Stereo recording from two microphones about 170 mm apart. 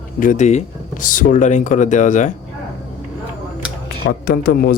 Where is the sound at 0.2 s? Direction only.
50° left (ahead or behind).